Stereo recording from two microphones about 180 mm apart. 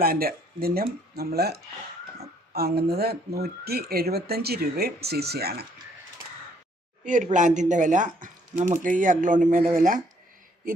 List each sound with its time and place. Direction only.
0.0 s speech: 55° right (ahead or behind)
7.0 s speech: 45° right (ahead or behind)